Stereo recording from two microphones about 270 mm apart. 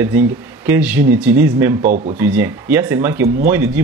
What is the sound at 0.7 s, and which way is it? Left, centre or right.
Speech, centre.